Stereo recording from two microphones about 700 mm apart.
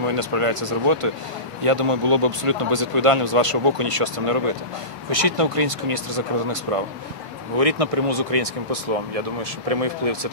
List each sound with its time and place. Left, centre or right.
0.0 s speech: right